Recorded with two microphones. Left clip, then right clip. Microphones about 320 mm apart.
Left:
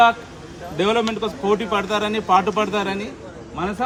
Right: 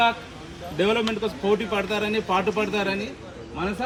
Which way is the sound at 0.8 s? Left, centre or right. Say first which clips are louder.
Left 3 dB; centre.